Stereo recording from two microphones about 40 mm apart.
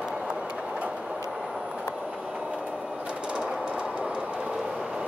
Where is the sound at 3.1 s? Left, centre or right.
Right.